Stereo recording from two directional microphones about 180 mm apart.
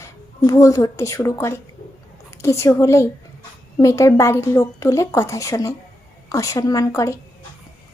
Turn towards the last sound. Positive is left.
turn(degrees=20)  # may be behind; listen again after turning